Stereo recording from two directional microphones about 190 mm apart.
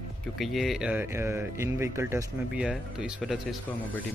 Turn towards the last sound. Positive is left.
turn(degrees=0)  # may be behind; listen again after turning